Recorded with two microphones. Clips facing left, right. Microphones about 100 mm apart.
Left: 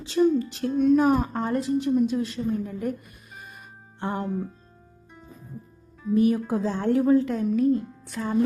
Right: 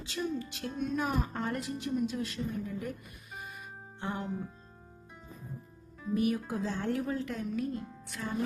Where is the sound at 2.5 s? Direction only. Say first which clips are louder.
Left 9 dB; 45° left (ahead or behind).